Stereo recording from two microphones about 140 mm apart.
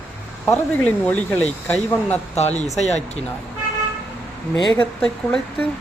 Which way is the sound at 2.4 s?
50° left (ahead or behind).